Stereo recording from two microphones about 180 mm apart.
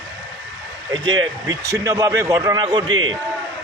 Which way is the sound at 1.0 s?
25° right (ahead or behind).